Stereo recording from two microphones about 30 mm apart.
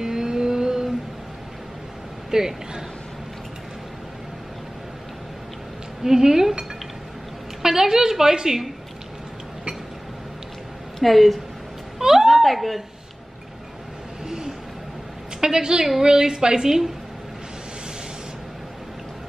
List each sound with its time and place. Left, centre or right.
0.0 s vehicle: centre
2.3 s a woman's voice: centre
6.0 s a woman's voice: centre
7.6 s a woman's voice: centre
11.0 s a woman's voice: centre
12.0 s a sound: centre
12.3 s a woman's voice: centre
14.2 s a sound: centre
15.4 s a woman's voice: right
16.6 s a woman's voice: centre